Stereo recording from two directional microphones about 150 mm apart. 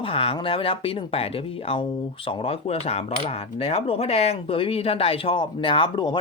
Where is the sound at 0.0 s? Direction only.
40° left (ahead or behind).